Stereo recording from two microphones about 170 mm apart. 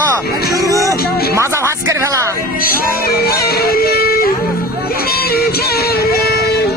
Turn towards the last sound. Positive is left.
turn(degrees=65)  # may be behind; listen again after turning